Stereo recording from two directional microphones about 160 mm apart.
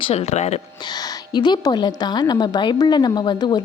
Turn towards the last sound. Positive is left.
turn(degrees=30)  # may be behind; listen again after turning